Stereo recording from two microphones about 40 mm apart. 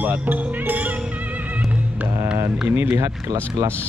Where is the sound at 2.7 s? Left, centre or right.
Right.